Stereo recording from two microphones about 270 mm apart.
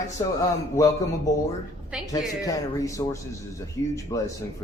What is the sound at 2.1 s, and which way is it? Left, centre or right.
Speech, centre.